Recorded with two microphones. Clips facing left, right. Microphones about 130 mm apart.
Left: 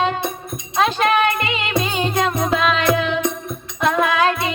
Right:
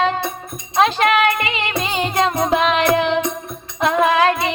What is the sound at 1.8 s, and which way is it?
Music, 25° right (ahead or behind).